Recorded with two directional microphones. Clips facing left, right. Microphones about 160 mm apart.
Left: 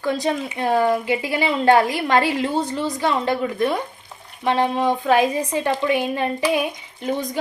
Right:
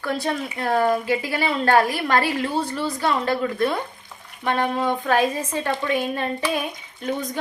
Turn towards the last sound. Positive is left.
turn(degrees=10)  # may be behind; listen again after turning